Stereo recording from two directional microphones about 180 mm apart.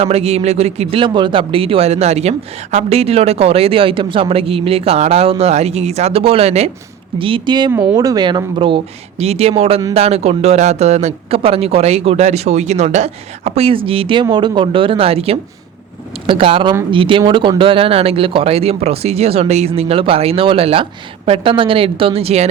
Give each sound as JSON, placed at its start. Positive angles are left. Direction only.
{"t": 0.0, "sound": "a woman's voice", "side_deg": -35}